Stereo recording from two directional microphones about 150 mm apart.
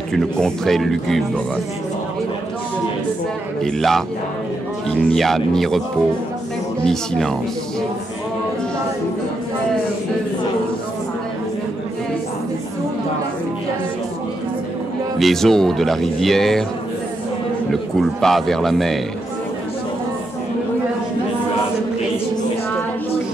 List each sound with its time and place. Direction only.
0.1 s speech: 5° left (ahead or behind)
3.6 s speech: centre (ahead or behind)
6.9 s speech: 5° left (ahead or behind)
15.1 s speech: centre (ahead or behind)
18.0 s speech: centre (ahead or behind)